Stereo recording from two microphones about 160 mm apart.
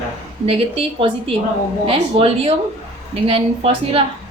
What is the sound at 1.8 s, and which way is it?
A woman's voice, 35° right (ahead or behind).